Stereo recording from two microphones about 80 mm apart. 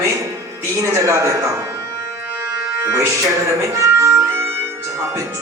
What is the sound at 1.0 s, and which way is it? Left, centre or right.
Music, right.